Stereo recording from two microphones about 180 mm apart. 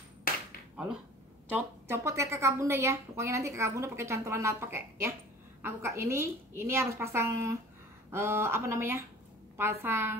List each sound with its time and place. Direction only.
1.5 s a woman's voice: 15° right (ahead or behind)